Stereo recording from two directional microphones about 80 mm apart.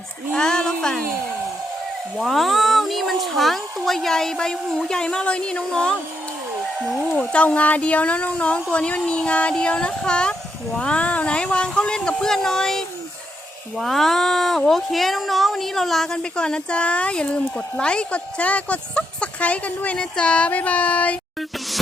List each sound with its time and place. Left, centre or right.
0.3 s speech: centre
2.1 s speech: centre
6.8 s speech: centre
7.2 s speech: centre
13.7 s speech: centre